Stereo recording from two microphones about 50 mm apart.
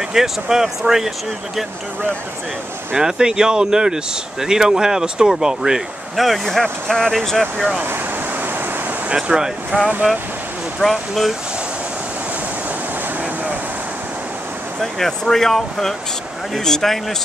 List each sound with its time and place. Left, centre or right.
0.1 s speech: centre
3.0 s speech: centre
6.1 s speech: centre
6.6 s speech: centre
9.1 s speech: centre
9.7 s speech: right
10.8 s speech: centre
14.8 s speech: centre